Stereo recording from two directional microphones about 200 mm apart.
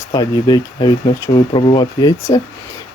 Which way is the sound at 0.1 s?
20° left (ahead or behind).